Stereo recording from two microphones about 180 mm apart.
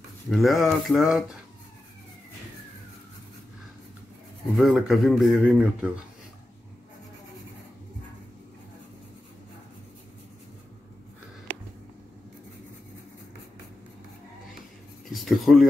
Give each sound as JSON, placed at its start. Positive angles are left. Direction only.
{"t": 0.3, "sound": "speech", "side_deg": 0}
{"t": 4.6, "sound": "speech", "side_deg": 0}
{"t": 15.1, "sound": "speech", "side_deg": 0}